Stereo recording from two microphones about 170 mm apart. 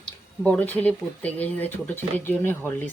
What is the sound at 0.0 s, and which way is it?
Speech, 5° left (ahead or behind).